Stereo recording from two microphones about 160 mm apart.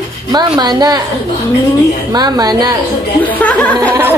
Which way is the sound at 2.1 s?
25° right (ahead or behind).